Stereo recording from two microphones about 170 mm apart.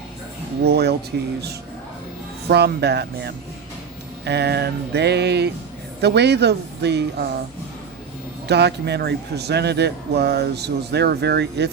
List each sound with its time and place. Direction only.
0.6 s speech: 70° right (ahead or behind)
2.5 s a woman's voice: 75° right (ahead or behind)
8.4 s speech: 75° right (ahead or behind)